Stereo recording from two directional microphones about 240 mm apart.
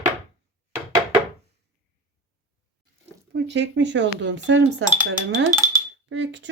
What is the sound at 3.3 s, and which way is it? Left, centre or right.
Speech, right.